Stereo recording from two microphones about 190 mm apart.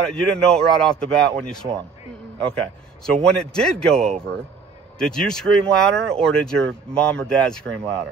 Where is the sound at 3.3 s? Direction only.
5° left (ahead or behind).